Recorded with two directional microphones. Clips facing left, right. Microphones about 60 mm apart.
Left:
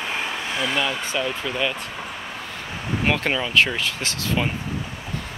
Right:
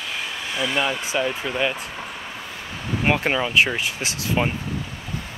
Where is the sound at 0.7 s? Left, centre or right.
Centre.